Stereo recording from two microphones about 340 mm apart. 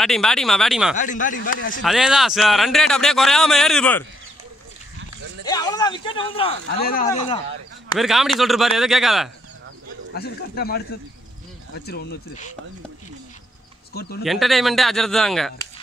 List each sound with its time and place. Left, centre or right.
0.0 s a man's voice: centre
0.9 s a man's voice: left
1.8 s a man's voice: centre
5.4 s speech: centre
6.8 s a man's voice: left
8.0 s a man's voice: centre
10.1 s a man's voice: left
13.9 s a man's voice: left
14.2 s a man's voice: centre